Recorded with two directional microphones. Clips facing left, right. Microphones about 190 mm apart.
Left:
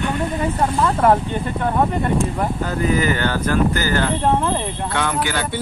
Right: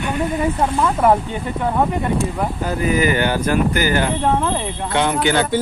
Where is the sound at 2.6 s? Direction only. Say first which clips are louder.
Right 2 dB; 10° right (ahead or behind).